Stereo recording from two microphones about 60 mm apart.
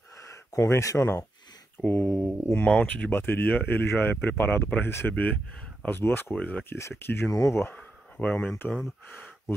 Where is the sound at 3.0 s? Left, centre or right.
Left.